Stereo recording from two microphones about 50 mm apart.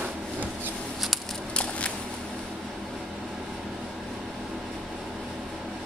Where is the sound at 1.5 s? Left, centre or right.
Left.